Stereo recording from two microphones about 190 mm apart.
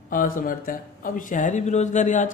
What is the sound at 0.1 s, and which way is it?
Speech, 45° left (ahead or behind).